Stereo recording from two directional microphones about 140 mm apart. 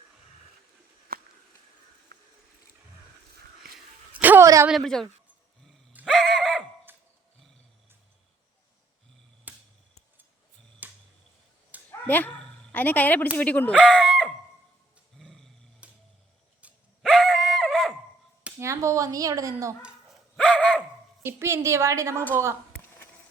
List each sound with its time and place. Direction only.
4.1 s a sound: 15° right (ahead or behind)
4.4 s speech: 20° right (ahead or behind)
4.7 s speech: 5° left (ahead or behind)
6.1 s neigh: 5° left (ahead or behind)
9.5 s a sound: 10° right (ahead or behind)
10.8 s a sound: 10° right (ahead or behind)
11.9 s dog: 15° left (ahead or behind)
13.3 s speech: 10° left (ahead or behind)
15.2 s roar: centre (ahead or behind)
15.8 s a sound: 10° right (ahead or behind)
18.6 s a woman's voice: 20° right (ahead or behind)
20.3 s dog: 5° left (ahead or behind)
21.2 s a woman's voice: 20° right (ahead or behind)